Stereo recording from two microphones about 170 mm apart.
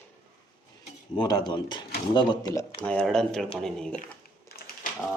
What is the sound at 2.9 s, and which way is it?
Speech, 5° left (ahead or behind).